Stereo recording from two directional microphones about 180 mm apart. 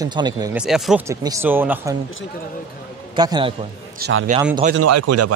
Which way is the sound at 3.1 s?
25° right (ahead or behind).